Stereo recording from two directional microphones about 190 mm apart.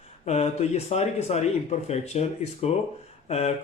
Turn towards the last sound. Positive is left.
turn(degrees=35)  # may be behind; listen again after turning